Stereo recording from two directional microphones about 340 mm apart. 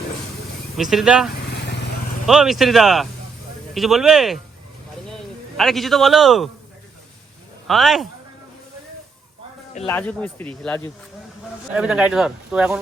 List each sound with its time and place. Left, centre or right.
0.8 s speech: centre
1.4 s vehicle: left
2.2 s a man's voice: centre
7.7 s speech: centre
9.9 s speech: centre